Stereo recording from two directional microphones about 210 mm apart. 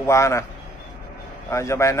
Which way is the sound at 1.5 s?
15° left (ahead or behind).